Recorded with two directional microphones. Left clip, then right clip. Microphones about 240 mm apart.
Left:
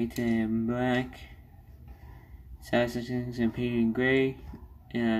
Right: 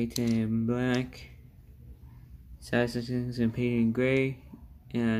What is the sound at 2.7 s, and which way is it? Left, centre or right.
Speech, right.